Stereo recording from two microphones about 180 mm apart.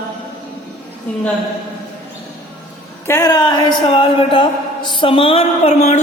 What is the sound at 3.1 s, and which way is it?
Speech, 20° left (ahead or behind).